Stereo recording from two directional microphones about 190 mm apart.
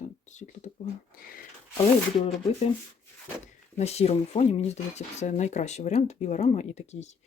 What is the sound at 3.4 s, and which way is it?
Speech, 35° left (ahead or behind).